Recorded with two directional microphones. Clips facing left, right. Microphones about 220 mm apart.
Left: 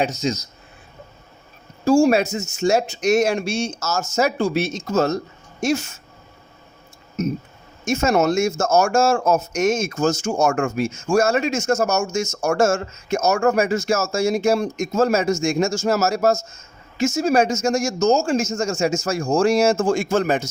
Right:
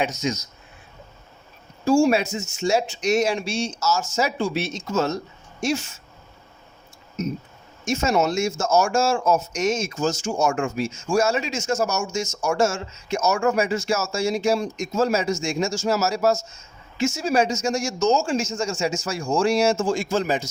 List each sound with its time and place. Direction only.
0.0 s speech: 30° left (ahead or behind)
1.8 s speech: 40° left (ahead or behind)
7.9 s speech: 50° left (ahead or behind)